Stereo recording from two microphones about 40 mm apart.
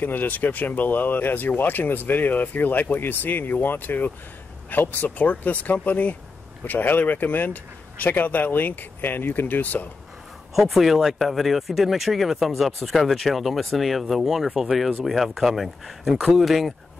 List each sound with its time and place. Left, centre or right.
0.0 s speech: left
10.5 s speech: centre